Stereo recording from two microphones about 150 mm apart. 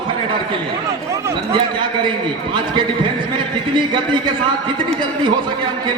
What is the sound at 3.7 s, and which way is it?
Speech, 30° right (ahead or behind).